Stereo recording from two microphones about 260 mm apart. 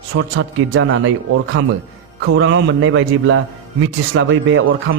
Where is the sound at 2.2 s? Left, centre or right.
Right.